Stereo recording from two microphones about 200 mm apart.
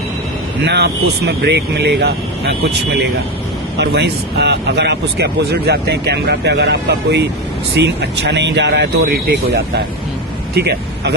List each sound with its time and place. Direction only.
0.6 s speech: 55° right (ahead or behind)